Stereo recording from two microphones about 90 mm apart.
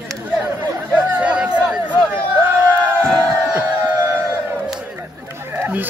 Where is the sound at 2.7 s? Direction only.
35° right (ahead or behind).